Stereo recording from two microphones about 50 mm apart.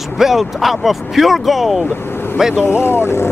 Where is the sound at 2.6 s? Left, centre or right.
Left.